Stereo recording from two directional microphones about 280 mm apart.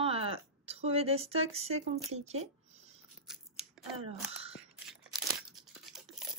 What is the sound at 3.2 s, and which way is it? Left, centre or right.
Scissors, centre.